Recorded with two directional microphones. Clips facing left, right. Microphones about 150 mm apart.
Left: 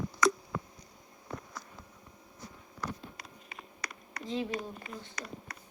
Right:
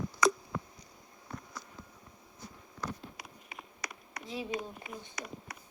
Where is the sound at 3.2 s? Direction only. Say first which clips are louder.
Even; 10° right (ahead or behind).